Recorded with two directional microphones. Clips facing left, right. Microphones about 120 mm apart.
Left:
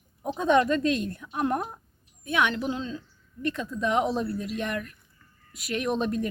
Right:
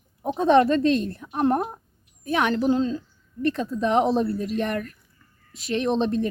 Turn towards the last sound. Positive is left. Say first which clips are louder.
# right 4 dB
turn(degrees=-30)  # may be behind; listen again after turning